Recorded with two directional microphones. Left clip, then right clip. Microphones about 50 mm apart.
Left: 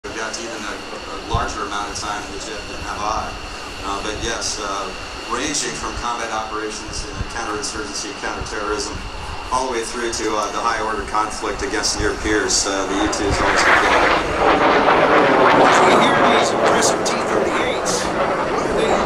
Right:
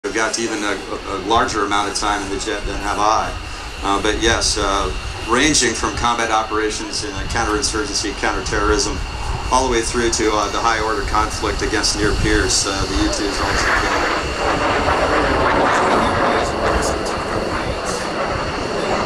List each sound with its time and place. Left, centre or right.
0.1 s speech: right
4.0 s speech: right
7.9 s speech: right; by 13.0 s centre
13.7 s vehicle: centre
17.5 s train: centre
18.0 s vehicle: centre
18.8 s vehicle: left